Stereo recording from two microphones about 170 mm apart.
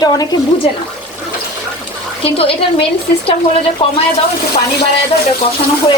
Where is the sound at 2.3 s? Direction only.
35° left (ahead or behind).